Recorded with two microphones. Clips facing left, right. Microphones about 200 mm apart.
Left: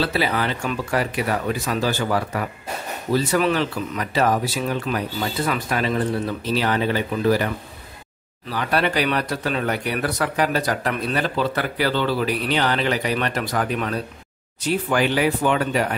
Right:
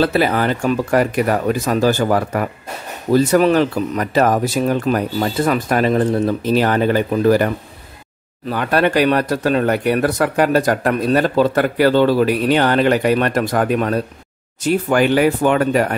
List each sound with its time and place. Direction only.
0.0 s speech: 50° right (ahead or behind)